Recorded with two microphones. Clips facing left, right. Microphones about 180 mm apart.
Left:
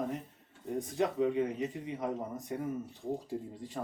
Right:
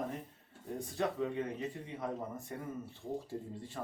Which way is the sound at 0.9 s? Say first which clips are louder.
Left 5 dB; 15° left (ahead or behind).